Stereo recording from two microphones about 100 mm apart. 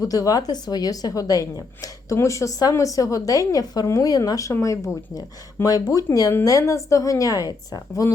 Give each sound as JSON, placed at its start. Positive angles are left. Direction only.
{"t": 0.0, "sound": "a woman's voice", "side_deg": 35}